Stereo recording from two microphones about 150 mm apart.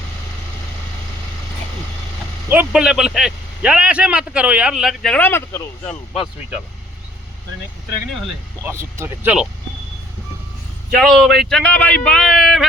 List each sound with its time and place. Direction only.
2.5 s a man's voice: 10° right (ahead or behind); by 6.0 s 15° left (ahead or behind)
8.6 s speech: 15° right (ahead or behind)
11.0 s a man's voice: centre (ahead or behind)